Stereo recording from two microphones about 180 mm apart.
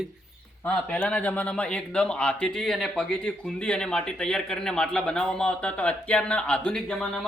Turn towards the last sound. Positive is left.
turn(degrees=5)  # may be behind; listen again after turning